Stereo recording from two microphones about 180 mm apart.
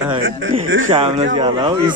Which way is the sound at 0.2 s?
90° right.